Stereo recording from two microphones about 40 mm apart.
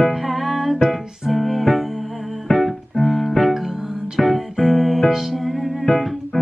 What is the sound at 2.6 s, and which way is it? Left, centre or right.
Keyboard, centre.